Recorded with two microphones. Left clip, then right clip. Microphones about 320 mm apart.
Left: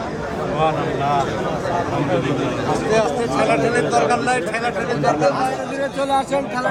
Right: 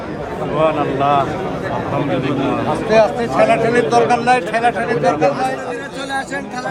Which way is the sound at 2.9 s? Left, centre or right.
Right.